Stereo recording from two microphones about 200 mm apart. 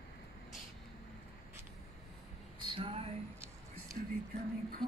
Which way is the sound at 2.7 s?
30° right (ahead or behind).